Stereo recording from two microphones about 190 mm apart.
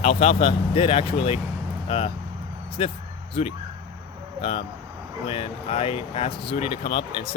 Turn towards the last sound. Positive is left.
turn(degrees=30)  # may be behind; listen again after turning